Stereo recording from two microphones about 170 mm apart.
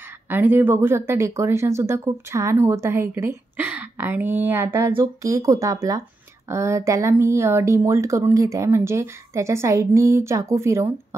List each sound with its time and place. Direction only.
0.3 s speech: 10° right (ahead or behind)